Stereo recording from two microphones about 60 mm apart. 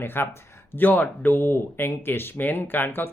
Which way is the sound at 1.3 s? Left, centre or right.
Left.